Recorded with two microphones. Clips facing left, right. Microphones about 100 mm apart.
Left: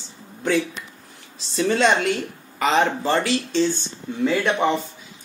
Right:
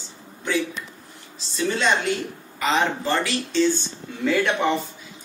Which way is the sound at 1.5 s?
75° left (ahead or behind).